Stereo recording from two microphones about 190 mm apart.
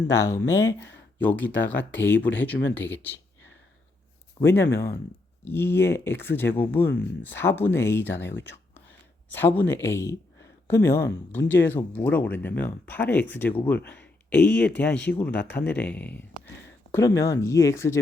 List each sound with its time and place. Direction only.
0.1 s speech: 15° left (ahead or behind)
4.4 s speech: 10° left (ahead or behind)
8.4 s a sound: 10° left (ahead or behind)
9.8 s speech: 15° left (ahead or behind)